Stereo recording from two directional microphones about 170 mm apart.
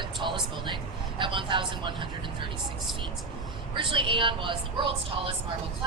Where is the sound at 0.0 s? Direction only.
25° right (ahead or behind).